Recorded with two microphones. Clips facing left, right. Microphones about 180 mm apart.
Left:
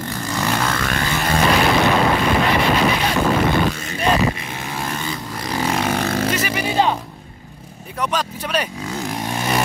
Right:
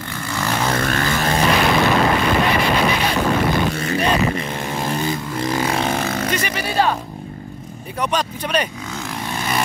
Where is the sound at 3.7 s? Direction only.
65° right (ahead or behind).